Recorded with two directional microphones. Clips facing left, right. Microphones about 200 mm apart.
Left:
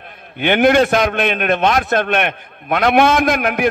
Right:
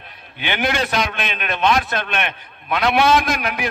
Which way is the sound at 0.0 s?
50° left (ahead or behind).